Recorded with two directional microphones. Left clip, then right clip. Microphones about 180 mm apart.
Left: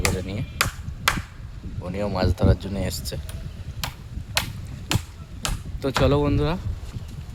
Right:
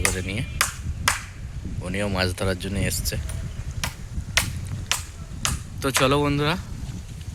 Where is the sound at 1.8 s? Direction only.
5° left (ahead or behind).